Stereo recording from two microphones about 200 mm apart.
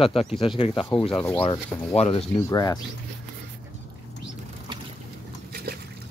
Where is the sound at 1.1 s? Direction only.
5° left (ahead or behind).